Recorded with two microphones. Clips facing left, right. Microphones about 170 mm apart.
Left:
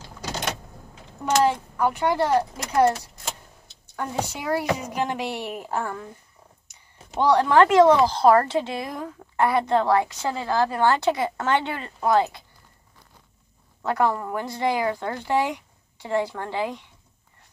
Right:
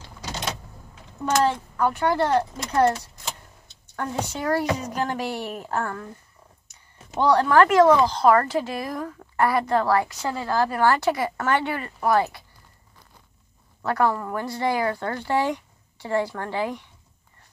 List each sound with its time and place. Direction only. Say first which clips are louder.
1.2 s a woman's voice: left 1 dB; 10° left (ahead or behind)
3.9 s a woman's voice: even; 10° left (ahead or behind)
6.7 s a sound: right 1 dB; 10° left (ahead or behind)
8.1 s a woman's voice: left 1 dB; 30° left (ahead or behind)
13.8 s a woman's voice: even; 15° left (ahead or behind)